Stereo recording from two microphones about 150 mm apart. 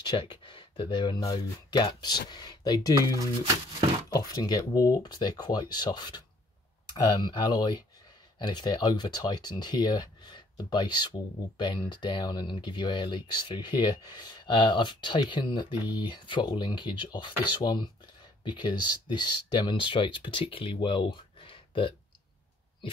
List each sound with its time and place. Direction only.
0.0 s speech: 30° left (ahead or behind)
4.1 s speech: 25° left (ahead or behind)